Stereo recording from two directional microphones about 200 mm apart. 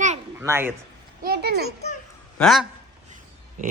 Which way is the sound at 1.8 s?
35° left (ahead or behind).